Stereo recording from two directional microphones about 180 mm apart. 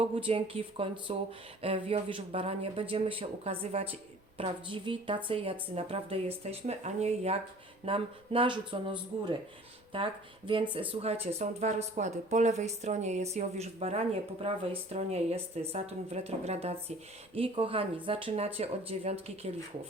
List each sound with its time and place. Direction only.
0.0 s speech: 30° right (ahead or behind)